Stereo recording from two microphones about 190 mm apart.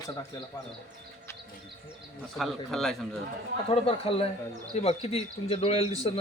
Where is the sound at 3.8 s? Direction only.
30° left (ahead or behind).